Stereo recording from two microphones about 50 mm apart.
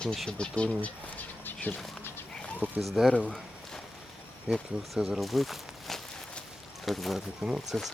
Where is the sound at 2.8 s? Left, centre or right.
Centre.